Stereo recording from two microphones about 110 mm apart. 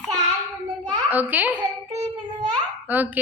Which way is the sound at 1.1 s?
15° right (ahead or behind).